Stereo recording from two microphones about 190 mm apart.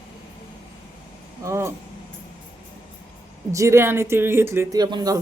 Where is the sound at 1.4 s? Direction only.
15° right (ahead or behind).